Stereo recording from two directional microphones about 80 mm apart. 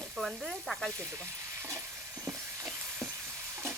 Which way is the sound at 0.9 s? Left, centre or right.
Right.